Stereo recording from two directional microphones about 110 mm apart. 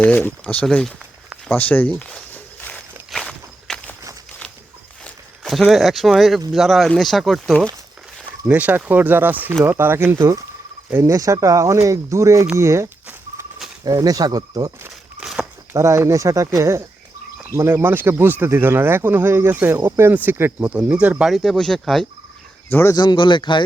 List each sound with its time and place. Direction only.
0.0 s speech: 15° left (ahead or behind)
1.5 s walk: 15° left (ahead or behind)
5.0 s speech: centre (ahead or behind)
8.4 s speech: 15° right (ahead or behind); by 12.5 s 30° right (ahead or behind)
12.5 s a sound: 25° right (ahead or behind)
13.8 s speech: 35° right (ahead or behind)
15.2 s a sound: 5° right (ahead or behind)
15.7 s speech: 30° right (ahead or behind); by 22.0 s 5° left (ahead or behind)
22.7 s speech: 20° left (ahead or behind)
23.0 s speech: 45° left (ahead or behind)